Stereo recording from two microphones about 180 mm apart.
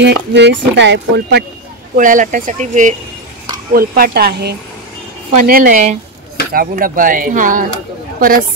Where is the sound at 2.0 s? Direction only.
45° right (ahead or behind).